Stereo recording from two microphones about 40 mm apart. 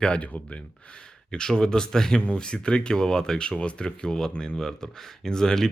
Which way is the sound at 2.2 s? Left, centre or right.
Left.